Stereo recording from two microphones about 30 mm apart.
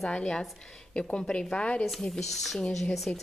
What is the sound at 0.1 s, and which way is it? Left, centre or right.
A woman's voice, left.